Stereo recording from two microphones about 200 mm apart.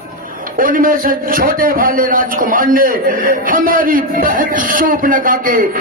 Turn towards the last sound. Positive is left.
turn(degrees=-45)  # may be behind; listen again after turning